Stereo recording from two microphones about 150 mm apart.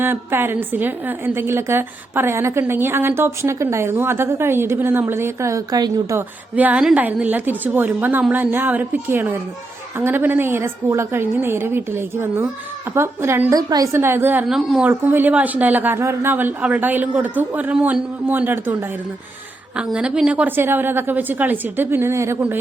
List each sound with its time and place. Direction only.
0.0 s a woman's voice: 15° right (ahead or behind)
6.1 s a woman's voice: 10° right (ahead or behind)
14.4 s a woman's voice: centre (ahead or behind)